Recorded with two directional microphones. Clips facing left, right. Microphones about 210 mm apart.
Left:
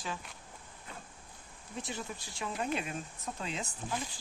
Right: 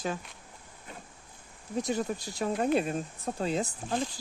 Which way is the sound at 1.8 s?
40° right (ahead or behind).